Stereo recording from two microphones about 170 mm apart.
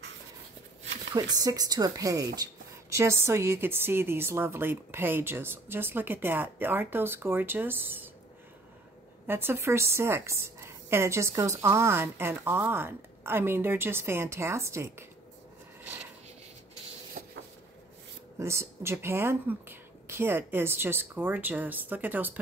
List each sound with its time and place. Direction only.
1.3 s a woman's voice: 20° right (ahead or behind)
9.3 s a woman's voice: 15° right (ahead or behind)
17.2 s a sound: 55° right (ahead or behind)
18.4 s a woman's voice: 15° right (ahead or behind)